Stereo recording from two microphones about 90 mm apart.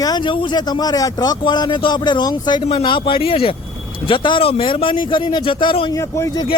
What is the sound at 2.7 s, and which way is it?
Speech, 70° left (ahead or behind).